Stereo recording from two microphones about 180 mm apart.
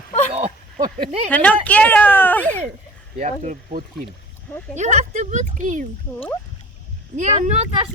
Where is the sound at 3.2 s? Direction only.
40° right (ahead or behind).